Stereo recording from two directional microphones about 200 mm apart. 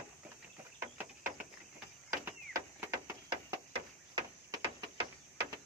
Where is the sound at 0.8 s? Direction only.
10° right (ahead or behind).